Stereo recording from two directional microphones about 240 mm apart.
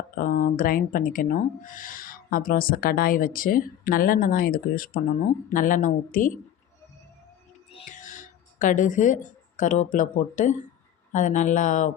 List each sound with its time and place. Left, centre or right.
0.2 s speech: left
7.7 s speech: left